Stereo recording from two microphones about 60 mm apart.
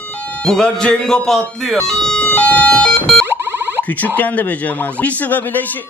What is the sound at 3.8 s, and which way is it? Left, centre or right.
Speech, left.